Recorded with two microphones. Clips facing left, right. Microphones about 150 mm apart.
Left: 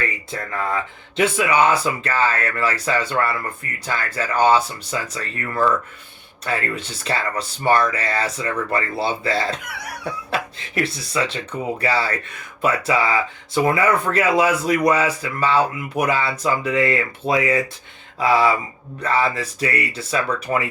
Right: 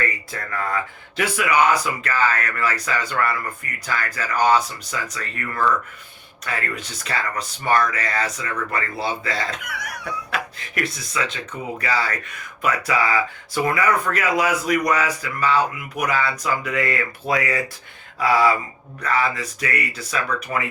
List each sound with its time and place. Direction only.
0.0 s speech: 25° left (ahead or behind)